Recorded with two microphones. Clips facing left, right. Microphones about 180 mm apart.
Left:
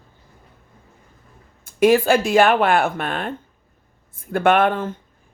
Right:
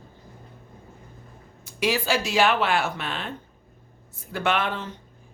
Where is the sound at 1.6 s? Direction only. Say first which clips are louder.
Left 10 dB; 50° left (ahead or behind).